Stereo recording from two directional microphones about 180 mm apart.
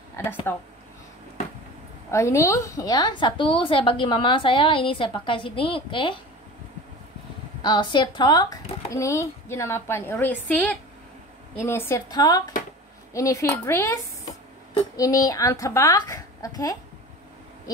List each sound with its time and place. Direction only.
0.1 s speech: 10° left (ahead or behind)
2.0 s a woman's voice: 15° left (ahead or behind)
7.6 s a woman's voice: 25° left (ahead or behind)